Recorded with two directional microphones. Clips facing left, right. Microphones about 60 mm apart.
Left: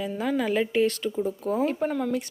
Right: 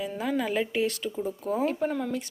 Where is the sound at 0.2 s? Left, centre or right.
Centre.